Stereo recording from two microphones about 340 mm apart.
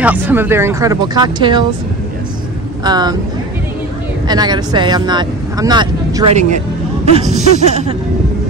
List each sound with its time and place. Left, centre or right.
0.0 s speech: centre
2.8 s speech: centre
4.3 s speech: centre